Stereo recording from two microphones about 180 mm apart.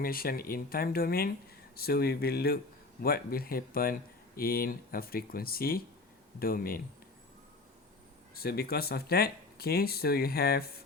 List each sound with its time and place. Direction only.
0.0 s speech: 55° left (ahead or behind)
8.4 s speech: 60° left (ahead or behind)